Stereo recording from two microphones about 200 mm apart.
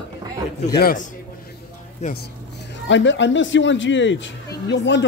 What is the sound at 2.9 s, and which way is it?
A man's voice, 65° left (ahead or behind).